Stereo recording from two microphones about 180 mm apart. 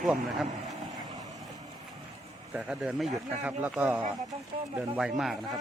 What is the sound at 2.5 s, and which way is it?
Speech, 5° right (ahead or behind).